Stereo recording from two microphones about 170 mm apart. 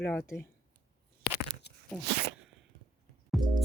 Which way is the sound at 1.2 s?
85° left.